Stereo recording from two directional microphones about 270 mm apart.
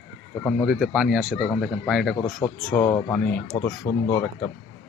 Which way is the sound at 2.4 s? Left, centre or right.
Centre.